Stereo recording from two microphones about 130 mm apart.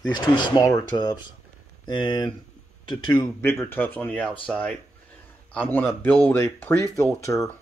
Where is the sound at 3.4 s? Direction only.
15° left (ahead or behind).